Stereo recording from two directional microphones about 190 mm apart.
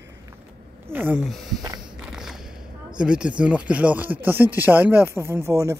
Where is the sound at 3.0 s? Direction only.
5° right (ahead or behind).